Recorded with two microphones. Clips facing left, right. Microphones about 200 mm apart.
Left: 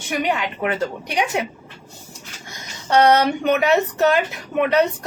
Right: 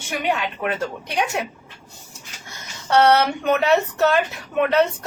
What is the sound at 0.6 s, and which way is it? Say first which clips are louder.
Speech: left 2 dB; 15° left (ahead or behind).